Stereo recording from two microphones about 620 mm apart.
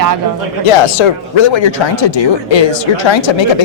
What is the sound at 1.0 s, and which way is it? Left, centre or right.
Speech, left.